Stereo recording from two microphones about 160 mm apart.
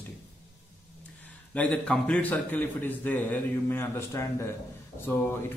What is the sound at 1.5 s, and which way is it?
A man's voice, 10° left (ahead or behind).